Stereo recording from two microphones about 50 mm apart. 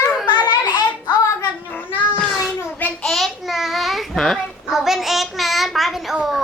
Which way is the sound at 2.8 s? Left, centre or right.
Left.